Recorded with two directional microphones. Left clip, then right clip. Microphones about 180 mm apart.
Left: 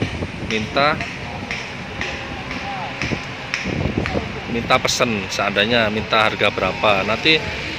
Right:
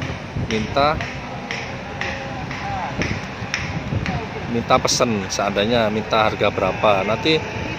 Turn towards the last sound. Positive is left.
turn(degrees=0)  # may be behind; listen again after turning